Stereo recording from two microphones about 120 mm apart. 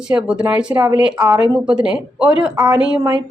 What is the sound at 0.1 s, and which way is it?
Speech, 5° right (ahead or behind).